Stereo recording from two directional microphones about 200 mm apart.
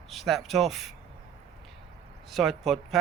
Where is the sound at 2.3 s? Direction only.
Centre (ahead or behind).